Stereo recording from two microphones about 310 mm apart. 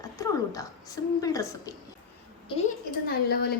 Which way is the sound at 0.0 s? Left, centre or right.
Centre.